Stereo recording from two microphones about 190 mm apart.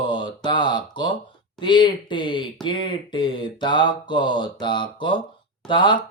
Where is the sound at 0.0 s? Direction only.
25° left (ahead or behind).